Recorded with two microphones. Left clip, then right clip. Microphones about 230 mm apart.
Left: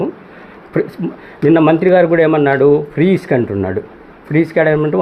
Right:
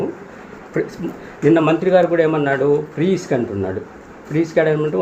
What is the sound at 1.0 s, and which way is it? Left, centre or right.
Speech, left.